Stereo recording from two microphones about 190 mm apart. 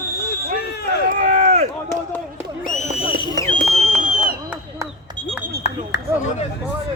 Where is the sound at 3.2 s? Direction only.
20° left (ahead or behind).